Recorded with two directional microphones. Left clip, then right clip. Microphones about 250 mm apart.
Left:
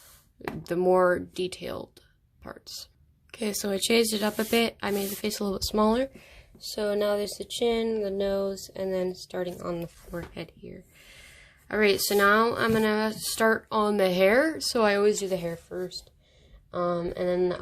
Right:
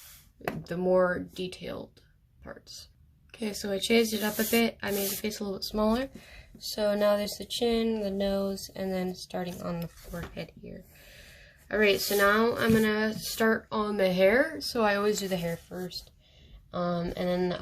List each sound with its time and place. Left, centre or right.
0.6 s speech: left
11.2 s speech: left; by 17.6 s centre